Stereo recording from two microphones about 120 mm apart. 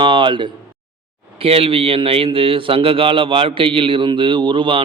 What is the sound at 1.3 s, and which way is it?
A man's voice, 50° right (ahead or behind).